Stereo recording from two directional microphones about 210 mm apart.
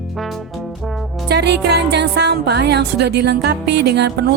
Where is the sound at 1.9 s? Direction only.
50° right (ahead or behind).